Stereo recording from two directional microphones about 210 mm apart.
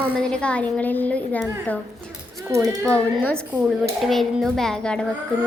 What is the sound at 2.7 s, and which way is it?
A woman's voice, 15° right (ahead or behind).